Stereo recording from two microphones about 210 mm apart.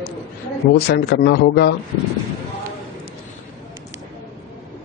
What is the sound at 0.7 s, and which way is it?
Speech, 50° left (ahead or behind).